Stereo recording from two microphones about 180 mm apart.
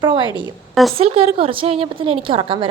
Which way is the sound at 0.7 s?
Centre (ahead or behind).